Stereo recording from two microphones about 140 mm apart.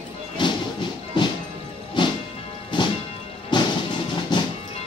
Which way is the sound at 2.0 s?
35° left (ahead or behind).